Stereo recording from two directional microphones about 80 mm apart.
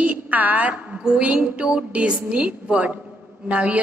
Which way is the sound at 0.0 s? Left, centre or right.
Centre.